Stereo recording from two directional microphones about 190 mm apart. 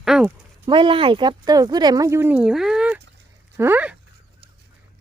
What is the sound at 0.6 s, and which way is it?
Speech, 25° right (ahead or behind).